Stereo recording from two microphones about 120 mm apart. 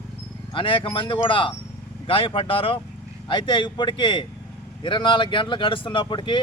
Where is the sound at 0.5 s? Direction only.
45° left (ahead or behind).